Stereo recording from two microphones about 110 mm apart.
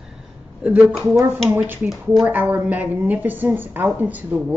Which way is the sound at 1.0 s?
20° right (ahead or behind).